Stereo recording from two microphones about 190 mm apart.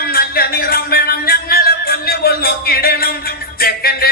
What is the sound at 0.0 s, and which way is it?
Music, 50° left (ahead or behind).